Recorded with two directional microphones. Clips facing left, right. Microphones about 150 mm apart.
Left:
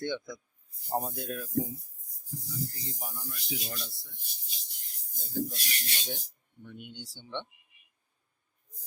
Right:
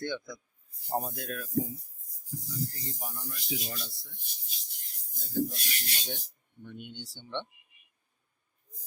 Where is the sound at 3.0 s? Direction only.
Centre (ahead or behind).